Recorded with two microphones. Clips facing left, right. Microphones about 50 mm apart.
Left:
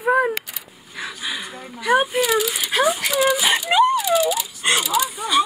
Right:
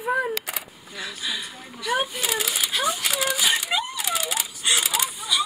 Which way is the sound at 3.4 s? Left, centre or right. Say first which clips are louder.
Left 8 dB; left.